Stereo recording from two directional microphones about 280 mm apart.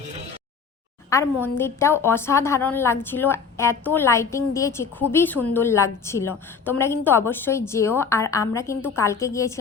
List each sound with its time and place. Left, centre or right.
1.1 s a woman's voice: centre